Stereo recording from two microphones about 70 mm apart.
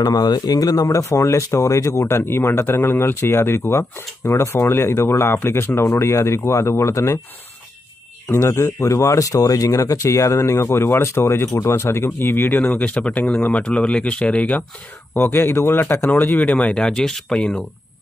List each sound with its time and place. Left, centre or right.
0.0 s speech: left
8.4 s speech: left; by 14.6 s centre
15.1 s speech: left
16.1 s speech: left